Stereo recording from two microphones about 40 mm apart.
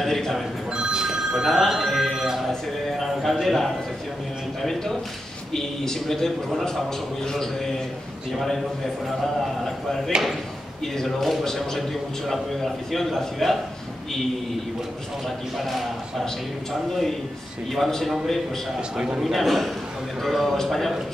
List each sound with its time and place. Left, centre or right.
0.0 s telephone bell ringing: centre
0.7 s telephone bell ringing: right
1.5 s telephone bell ringing: centre
2.1 s music: centre
3.0 s a sound: centre
5.5 s a man's voice: centre
8.3 s a man's voice: centre
10.1 s a man's voice: right
11.0 s a man's voice: centre
12.9 s a man's voice: centre
15.2 s a man's voice: centre
17.7 s a man's voice: centre
18.9 s a man's voice: right
19.2 s a man's voice: centre